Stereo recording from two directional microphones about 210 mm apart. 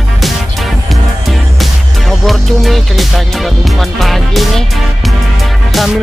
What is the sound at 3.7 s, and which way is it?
Speech, centre (ahead or behind).